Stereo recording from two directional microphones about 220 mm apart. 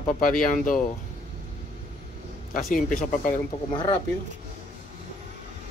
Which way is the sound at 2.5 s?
40° left (ahead or behind).